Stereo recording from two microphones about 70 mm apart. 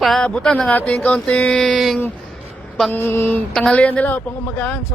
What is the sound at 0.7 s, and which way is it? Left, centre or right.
Speech, left.